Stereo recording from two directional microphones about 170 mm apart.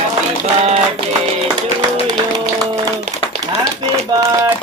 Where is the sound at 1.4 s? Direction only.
25° right (ahead or behind).